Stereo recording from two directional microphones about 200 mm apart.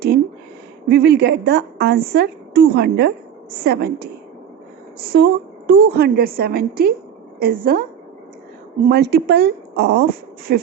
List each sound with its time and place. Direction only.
0.9 s a woman's voice: 55° right (ahead or behind)
8.9 s a woman's voice: 55° right (ahead or behind)